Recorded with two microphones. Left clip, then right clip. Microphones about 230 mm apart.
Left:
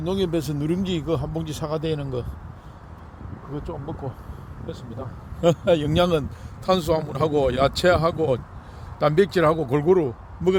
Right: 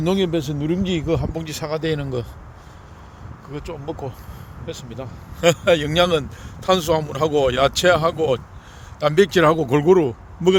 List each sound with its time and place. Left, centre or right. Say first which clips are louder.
0.2 s speech: right 3 dB; centre
3.5 s speech: right 3 dB; right